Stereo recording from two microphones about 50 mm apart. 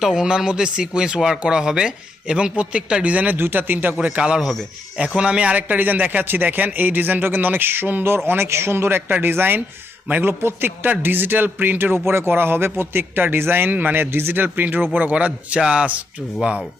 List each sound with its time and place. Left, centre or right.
0.0 s a man's voice: centre; by 3.3 s right
3.3 s speech: right
4.2 s a man's voice: right
8.0 s speech: right
15.1 s a man's voice: right